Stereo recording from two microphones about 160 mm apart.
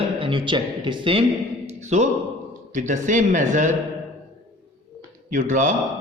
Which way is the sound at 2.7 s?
50° right (ahead or behind).